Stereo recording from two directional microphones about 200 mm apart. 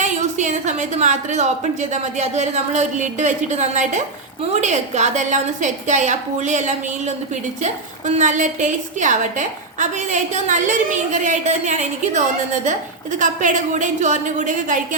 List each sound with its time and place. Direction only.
0.0 s a woman's voice: 35° right (ahead or behind)